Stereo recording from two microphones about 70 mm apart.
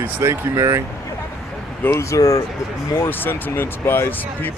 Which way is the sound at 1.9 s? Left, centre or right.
Left.